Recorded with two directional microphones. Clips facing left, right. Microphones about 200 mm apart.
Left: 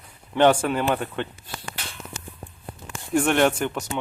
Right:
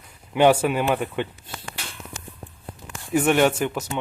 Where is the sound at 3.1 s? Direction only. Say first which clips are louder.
Right 1 dB; 5° right (ahead or behind).